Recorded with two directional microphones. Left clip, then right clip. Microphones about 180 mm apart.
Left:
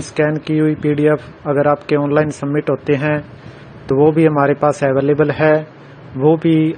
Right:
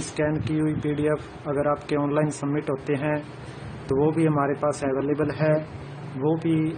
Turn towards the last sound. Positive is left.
turn(degrees=35)  # may be behind; listen again after turning